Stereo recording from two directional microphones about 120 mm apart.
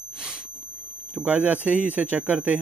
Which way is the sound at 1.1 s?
15° right (ahead or behind).